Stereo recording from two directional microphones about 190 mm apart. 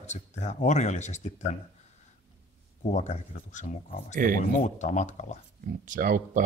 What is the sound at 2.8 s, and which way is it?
Speech, 40° left (ahead or behind).